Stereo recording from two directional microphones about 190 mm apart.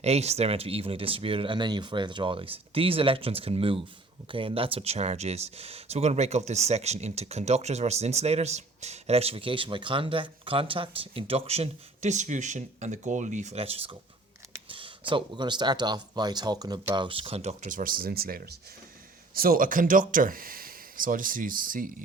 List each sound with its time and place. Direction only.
0.0 s speech: 35° right (ahead or behind)